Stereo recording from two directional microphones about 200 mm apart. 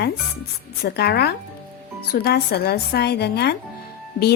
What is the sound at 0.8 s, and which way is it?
Speech, 55° left (ahead or behind).